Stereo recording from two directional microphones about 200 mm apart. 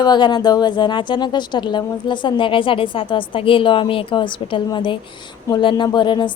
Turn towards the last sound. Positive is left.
turn(degrees=25)  # may be behind; listen again after turning